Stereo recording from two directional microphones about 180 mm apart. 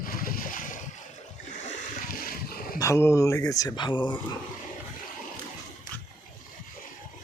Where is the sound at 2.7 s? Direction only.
15° left (ahead or behind).